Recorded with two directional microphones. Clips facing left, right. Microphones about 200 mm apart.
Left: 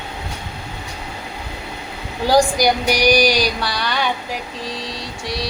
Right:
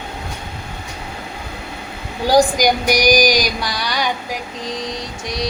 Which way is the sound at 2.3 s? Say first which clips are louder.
Right 1 dB; 15° right (ahead or behind).